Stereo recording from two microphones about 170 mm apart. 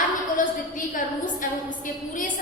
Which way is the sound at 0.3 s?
50° left (ahead or behind).